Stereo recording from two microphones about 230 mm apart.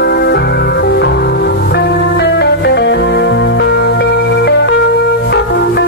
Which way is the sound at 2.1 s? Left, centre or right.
Left.